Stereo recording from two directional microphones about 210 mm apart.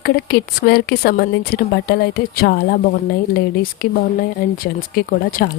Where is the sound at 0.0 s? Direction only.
50° left (ahead or behind).